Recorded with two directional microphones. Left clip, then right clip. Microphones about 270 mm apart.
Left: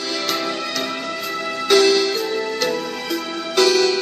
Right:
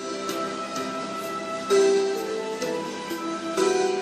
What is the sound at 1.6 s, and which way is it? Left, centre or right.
Music, left.